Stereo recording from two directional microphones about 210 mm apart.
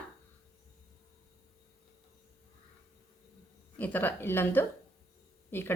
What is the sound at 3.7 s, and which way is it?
Speech, 10° left (ahead or behind).